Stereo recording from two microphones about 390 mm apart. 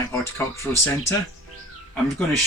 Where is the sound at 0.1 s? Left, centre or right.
Centre.